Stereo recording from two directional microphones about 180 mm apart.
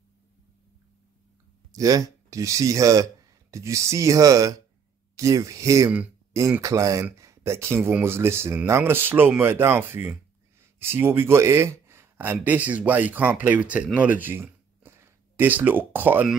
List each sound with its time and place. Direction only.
1.7 s speech: 20° right (ahead or behind)